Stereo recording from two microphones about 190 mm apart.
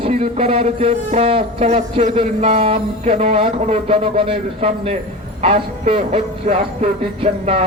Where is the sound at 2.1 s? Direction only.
30° right (ahead or behind).